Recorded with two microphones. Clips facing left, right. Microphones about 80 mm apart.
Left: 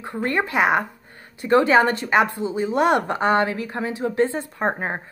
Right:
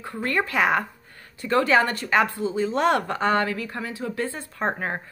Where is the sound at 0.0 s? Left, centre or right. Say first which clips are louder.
Left 2 dB; left.